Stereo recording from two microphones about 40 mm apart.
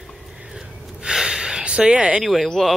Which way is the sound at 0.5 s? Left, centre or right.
Centre.